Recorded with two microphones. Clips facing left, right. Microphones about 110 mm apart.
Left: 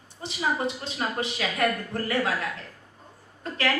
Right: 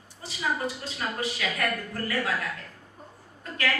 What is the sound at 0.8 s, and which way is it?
A woman's voice, 25° left (ahead or behind).